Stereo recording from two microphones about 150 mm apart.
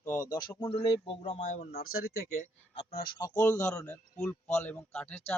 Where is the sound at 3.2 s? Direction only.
20° left (ahead or behind).